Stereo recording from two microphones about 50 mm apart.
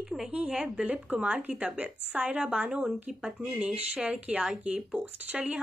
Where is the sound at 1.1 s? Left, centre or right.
Right.